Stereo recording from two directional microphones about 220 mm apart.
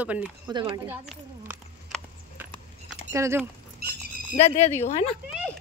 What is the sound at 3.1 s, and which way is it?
Speech, 10° right (ahead or behind).